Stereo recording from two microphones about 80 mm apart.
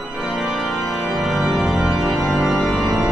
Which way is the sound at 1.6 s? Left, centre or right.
Centre.